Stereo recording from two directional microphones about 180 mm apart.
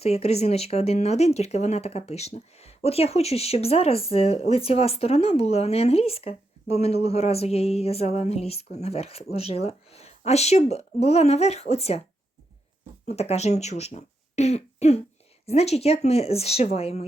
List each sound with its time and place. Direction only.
0.0 s speech: 35° left (ahead or behind)
13.1 s speech: 35° left (ahead or behind)